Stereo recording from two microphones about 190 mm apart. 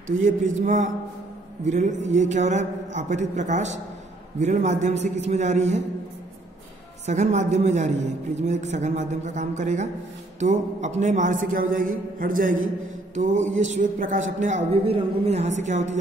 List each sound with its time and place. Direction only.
0.2 s a man's voice: 40° right (ahead or behind)
7.1 s a man's voice: 40° right (ahead or behind)